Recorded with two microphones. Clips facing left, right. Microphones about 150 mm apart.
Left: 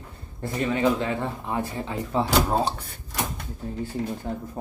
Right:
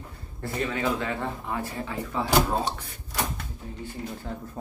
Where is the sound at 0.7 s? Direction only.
20° left (ahead or behind).